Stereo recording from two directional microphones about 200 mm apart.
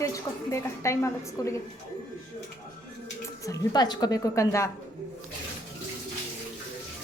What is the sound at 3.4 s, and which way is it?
A woman's voice, 15° left (ahead or behind).